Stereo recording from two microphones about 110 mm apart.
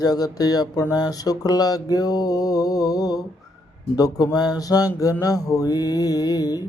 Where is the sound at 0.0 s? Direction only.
35° left (ahead or behind).